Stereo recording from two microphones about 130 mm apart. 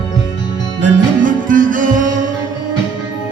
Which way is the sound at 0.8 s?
90° right.